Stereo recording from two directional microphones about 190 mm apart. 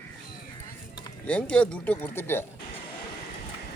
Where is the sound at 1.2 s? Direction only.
5° left (ahead or behind).